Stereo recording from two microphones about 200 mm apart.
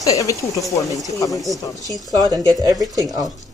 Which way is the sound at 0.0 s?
15° left (ahead or behind).